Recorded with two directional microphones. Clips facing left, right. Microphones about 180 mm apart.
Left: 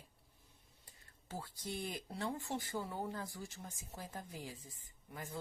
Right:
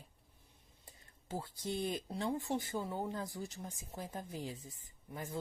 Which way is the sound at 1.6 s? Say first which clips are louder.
Right 6 dB; 20° right (ahead or behind).